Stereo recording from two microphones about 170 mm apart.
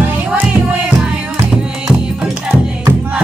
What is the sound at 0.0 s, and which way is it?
Music, 10° right (ahead or behind).